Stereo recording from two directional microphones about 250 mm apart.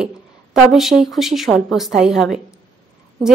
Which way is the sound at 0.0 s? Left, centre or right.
Centre.